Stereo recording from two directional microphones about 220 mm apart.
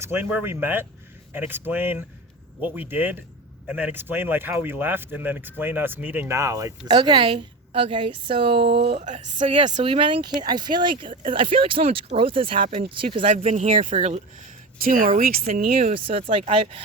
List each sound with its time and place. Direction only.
0.0 s speech: 10° right (ahead or behind)
11.1 s speech: 35° right (ahead or behind)
11.3 s speech: 25° right (ahead or behind)
16.0 s speech: 25° right (ahead or behind)